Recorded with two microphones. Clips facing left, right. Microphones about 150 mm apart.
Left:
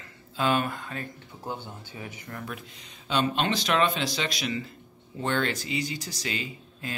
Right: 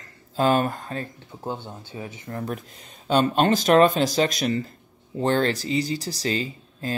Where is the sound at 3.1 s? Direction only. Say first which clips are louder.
Right 7 dB; 45° right (ahead or behind).